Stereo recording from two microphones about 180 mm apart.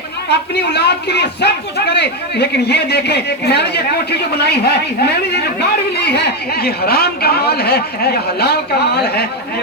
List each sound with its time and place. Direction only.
0.3 s speech: 70° left (ahead or behind)